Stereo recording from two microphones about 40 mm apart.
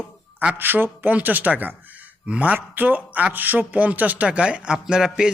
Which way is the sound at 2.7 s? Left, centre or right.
Right.